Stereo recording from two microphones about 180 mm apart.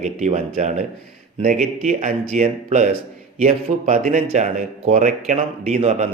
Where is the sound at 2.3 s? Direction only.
40° right (ahead or behind).